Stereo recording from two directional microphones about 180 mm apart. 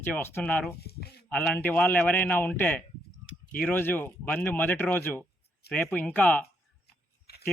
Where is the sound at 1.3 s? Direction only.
5° left (ahead or behind).